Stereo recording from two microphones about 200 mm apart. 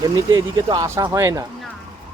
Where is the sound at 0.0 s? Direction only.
20° right (ahead or behind).